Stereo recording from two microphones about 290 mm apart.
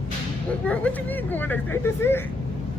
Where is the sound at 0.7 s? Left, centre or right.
Centre.